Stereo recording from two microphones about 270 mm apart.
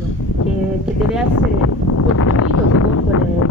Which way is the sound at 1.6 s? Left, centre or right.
Left.